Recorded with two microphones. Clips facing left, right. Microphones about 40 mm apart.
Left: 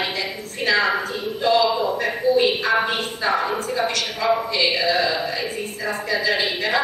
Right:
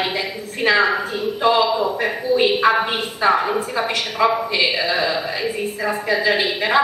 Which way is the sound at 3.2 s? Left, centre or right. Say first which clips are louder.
Right 5 dB; centre.